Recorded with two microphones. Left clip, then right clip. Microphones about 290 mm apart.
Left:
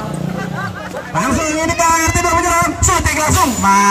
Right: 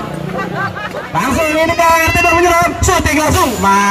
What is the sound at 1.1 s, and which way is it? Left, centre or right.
Music, right.